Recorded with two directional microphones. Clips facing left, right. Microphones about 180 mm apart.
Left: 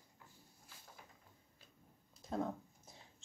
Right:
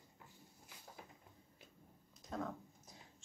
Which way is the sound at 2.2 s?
30° left (ahead or behind).